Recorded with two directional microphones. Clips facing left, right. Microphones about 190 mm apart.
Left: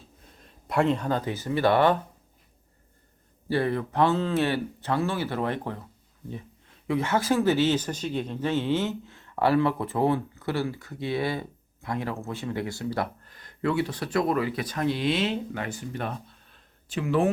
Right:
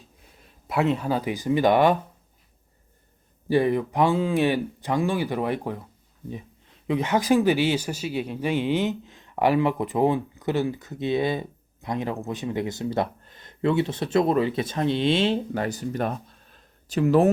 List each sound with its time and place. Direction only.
0.4 s speech: 5° right (ahead or behind)
3.5 s speech: 15° right (ahead or behind)
6.8 s speech: 20° right (ahead or behind); by 17.3 s 40° right (ahead or behind)